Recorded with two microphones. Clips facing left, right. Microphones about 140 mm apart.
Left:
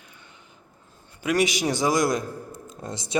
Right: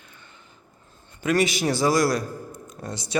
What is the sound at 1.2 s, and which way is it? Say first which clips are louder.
A man's voice: right 1 dB; 15° left (ahead or behind).